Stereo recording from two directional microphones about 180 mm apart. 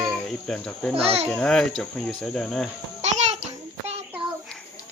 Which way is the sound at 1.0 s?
35° right (ahead or behind).